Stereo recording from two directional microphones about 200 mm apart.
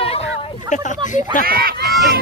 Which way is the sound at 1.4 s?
50° right (ahead or behind).